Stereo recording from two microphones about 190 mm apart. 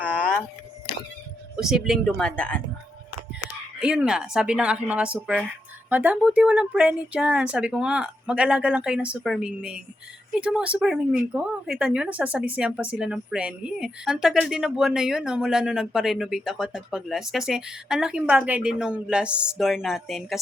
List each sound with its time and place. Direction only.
0.0 s a sound: 5° left (ahead or behind)
1.5 s speech: 5° right (ahead or behind)
3.8 s speech: 5° right (ahead or behind)